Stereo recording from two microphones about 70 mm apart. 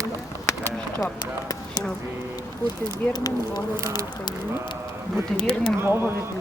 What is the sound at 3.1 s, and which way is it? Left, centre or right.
Speech, left.